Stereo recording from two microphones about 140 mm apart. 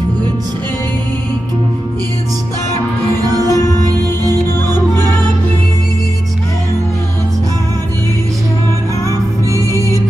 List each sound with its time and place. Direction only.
3.2 s music: 25° right (ahead or behind)
9.0 s music: 20° right (ahead or behind)